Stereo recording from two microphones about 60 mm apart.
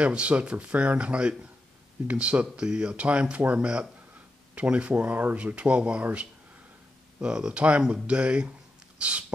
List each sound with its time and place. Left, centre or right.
0.0 s speech: centre
7.2 s speech: centre